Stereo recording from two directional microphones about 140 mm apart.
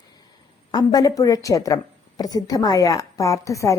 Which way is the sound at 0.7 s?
30° left (ahead or behind).